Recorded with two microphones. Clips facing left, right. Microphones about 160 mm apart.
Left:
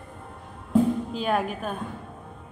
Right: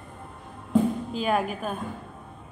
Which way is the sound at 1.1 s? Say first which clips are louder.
Even; centre (ahead or behind).